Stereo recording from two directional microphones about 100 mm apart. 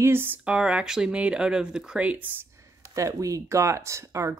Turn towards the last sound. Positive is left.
turn(degrees=-30)  # may be behind; listen again after turning